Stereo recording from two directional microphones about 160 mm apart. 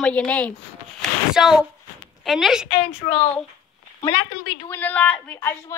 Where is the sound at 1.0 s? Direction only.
Centre (ahead or behind).